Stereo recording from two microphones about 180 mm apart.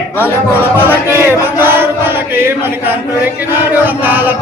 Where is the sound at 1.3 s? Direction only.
10° right (ahead or behind).